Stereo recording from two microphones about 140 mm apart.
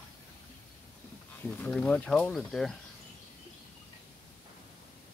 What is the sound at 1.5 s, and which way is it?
Speech, 10° left (ahead or behind).